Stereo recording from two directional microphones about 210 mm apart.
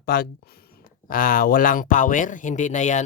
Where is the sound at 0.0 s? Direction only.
45° left (ahead or behind).